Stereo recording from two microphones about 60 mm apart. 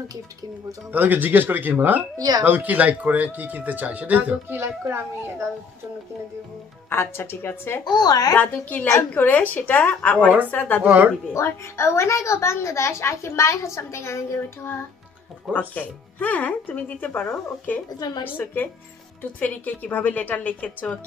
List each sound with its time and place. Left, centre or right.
0.9 s speech: right
2.1 s speech: right
2.4 s speech: right
4.6 s a child's voice: right
6.9 s speech: left
8.1 s a child's voice: left
8.4 s a woman's voice: left
10.8 s speech: right
11.3 s a woman's voice: left
15.7 s a woman's voice: left